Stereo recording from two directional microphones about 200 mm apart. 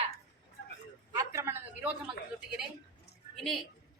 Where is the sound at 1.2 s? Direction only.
15° right (ahead or behind).